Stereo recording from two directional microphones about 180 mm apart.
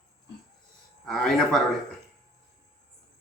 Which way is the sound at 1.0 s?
Centre (ahead or behind).